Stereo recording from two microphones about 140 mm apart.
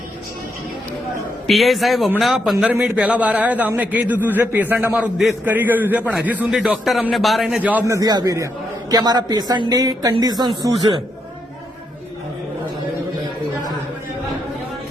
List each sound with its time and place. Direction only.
1.5 s a man's voice: centre (ahead or behind)
7.9 s speech: 25° right (ahead or behind)